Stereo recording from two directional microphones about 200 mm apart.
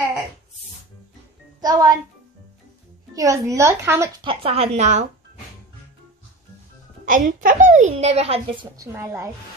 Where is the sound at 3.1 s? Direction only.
15° right (ahead or behind).